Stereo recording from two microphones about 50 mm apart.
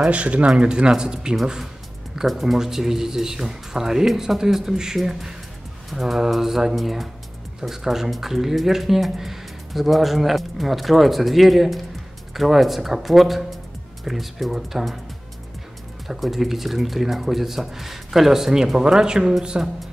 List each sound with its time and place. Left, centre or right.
0.0 s speech: right; by 15.0 s centre
16.1 s speech: centre